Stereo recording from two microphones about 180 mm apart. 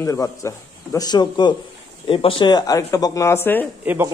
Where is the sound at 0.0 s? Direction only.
15° left (ahead or behind).